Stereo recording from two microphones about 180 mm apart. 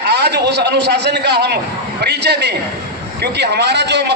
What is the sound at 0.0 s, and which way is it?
A man's voice, 65° right (ahead or behind).